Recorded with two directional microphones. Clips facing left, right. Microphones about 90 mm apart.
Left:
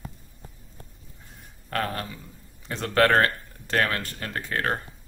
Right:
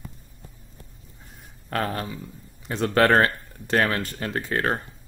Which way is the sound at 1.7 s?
15° right (ahead or behind).